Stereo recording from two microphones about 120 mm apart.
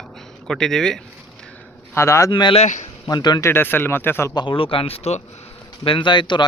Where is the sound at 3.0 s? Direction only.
35° left (ahead or behind).